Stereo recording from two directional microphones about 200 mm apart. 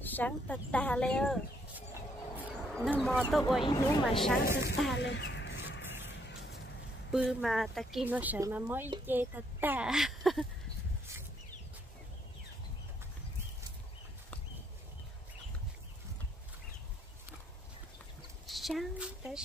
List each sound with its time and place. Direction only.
0.0 s speech: 10° left (ahead or behind)
2.7 s speech: centre (ahead or behind)
3.6 s speech: 20° left (ahead or behind)
4.4 s speech: 50° left (ahead or behind)
4.9 s a sound: 60° left (ahead or behind)
7.1 s speech: centre (ahead or behind)
18.5 s a sound: centre (ahead or behind)